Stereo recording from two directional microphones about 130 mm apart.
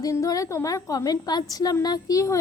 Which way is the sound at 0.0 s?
25° left (ahead or behind).